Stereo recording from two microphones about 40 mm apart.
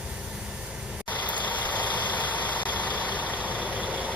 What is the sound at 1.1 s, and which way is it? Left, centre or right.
Vehicle, left.